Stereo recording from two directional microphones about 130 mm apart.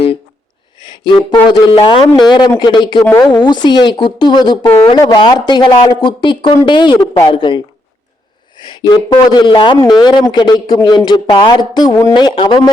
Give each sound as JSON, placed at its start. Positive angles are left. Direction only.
{"t": 0.8, "sound": "music", "side_deg": 35}
{"t": 1.7, "sound": "a woman's voice", "side_deg": 35}
{"t": 3.1, "sound": "speech", "side_deg": 15}
{"t": 3.3, "sound": "a woman's voice", "side_deg": 35}